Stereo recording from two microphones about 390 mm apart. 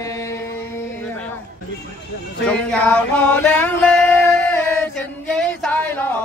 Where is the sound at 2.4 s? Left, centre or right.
Centre.